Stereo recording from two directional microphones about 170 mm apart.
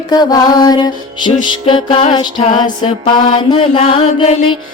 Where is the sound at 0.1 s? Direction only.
20° left (ahead or behind).